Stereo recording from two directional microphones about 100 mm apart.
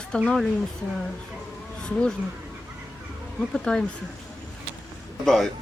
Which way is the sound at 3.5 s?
5° left (ahead or behind).